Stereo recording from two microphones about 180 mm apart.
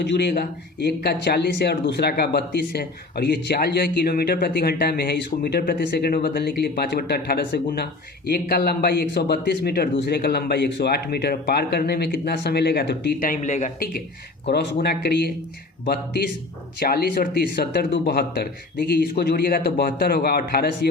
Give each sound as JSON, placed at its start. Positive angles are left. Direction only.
{"t": 0.0, "sound": "speech", "side_deg": 70}
{"t": 14.4, "sound": "speech", "side_deg": 65}
{"t": 16.8, "sound": "speech", "side_deg": 60}